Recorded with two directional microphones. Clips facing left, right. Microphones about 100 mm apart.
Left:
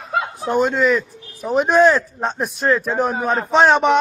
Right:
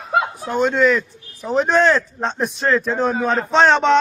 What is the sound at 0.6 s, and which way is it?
Speech, 5° left (ahead or behind).